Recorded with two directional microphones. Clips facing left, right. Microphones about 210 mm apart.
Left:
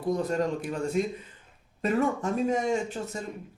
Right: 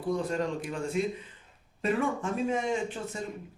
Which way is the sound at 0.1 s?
40° left (ahead or behind).